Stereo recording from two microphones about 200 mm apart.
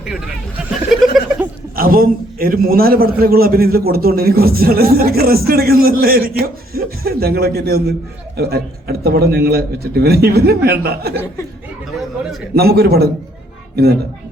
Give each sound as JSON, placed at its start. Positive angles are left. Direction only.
{"t": 0.9, "sound": "chuckle", "side_deg": 0}
{"t": 1.7, "sound": "a man's voice", "side_deg": -45}
{"t": 12.5, "sound": "a man's voice", "side_deg": -50}